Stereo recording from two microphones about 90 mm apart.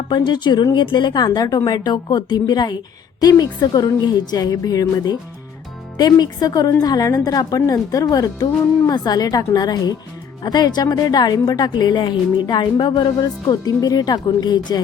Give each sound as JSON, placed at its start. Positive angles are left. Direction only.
{"t": 0.1, "sound": "a woman's voice", "side_deg": 55}